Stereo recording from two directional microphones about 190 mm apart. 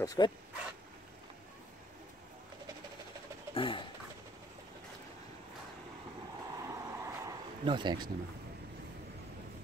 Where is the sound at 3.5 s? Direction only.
25° left (ahead or behind).